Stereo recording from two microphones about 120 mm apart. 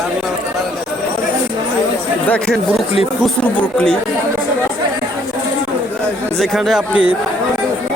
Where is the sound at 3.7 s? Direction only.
5° left (ahead or behind).